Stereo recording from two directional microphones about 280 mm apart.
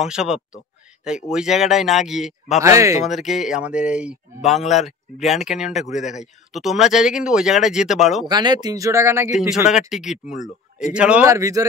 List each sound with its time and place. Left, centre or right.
0.0 s speech: centre
8.3 s speech: centre
10.3 s speech: left
10.9 s speech: centre